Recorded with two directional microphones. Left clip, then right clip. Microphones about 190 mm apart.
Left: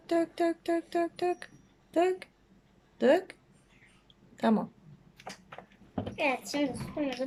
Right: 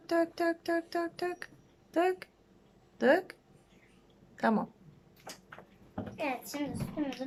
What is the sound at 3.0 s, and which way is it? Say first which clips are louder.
Speech: left 2 dB; centre (ahead or behind).